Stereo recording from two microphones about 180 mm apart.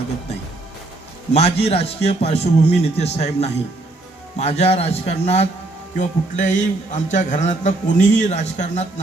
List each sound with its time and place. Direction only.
1.3 s a man's voice: 35° left (ahead or behind)
2.4 s speech: 70° left (ahead or behind)
3.0 s a man's voice: 35° left (ahead or behind)